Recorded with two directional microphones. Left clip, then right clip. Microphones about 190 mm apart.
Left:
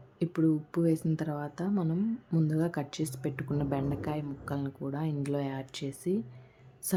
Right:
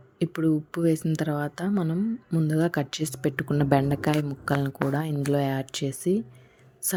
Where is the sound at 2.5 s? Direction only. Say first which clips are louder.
Right 7 dB; 20° right (ahead or behind).